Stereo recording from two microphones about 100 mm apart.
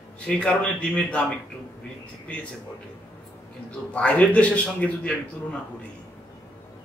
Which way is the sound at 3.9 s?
15° left (ahead or behind).